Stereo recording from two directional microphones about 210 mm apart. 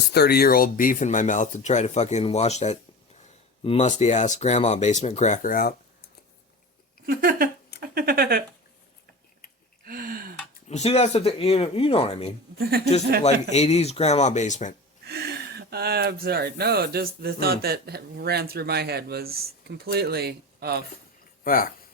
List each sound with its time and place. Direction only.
0.1 s speech: 50° left (ahead or behind)
7.0 s speech: 45° right (ahead or behind)
9.8 s a sound: 45° right (ahead or behind)
10.7 s speech: 30° left (ahead or behind)
15.0 s speech: 50° right (ahead or behind)
21.4 s speech: 40° left (ahead or behind)